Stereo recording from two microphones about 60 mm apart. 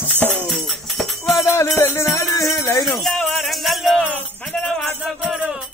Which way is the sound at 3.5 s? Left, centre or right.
Centre.